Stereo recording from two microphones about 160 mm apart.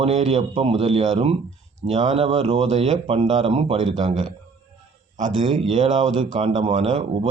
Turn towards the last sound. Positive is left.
turn(degrees=-40)  # may be behind; listen again after turning